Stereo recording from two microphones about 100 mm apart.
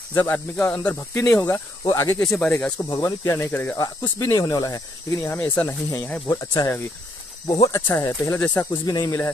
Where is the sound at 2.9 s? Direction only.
30° left (ahead or behind).